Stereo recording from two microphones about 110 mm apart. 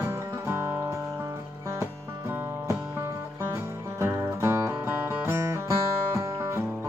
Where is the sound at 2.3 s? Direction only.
20° right (ahead or behind).